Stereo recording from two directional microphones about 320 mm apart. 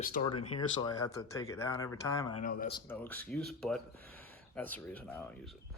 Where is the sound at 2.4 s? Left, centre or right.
Left.